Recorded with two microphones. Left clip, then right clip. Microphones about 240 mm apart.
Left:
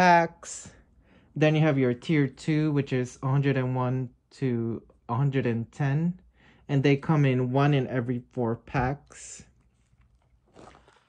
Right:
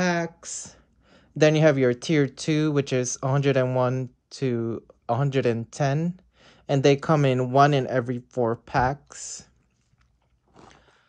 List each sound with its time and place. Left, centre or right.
0.0 s speech: centre
0.5 s speech: centre
1.0 s speech: centre